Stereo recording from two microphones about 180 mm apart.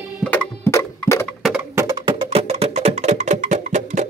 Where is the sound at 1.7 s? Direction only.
20° right (ahead or behind); by 4.0 s 40° right (ahead or behind).